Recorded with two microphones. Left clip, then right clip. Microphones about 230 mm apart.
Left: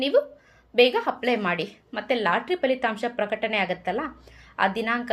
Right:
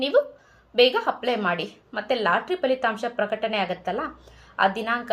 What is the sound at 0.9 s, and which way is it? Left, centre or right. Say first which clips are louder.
A woman's voice: right 1 dB; left.